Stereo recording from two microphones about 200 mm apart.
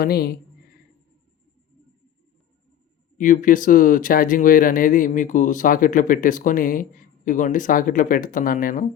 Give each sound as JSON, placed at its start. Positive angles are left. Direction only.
{"t": 0.0, "sound": "speech", "side_deg": 50}
{"t": 3.2, "sound": "speech", "side_deg": 40}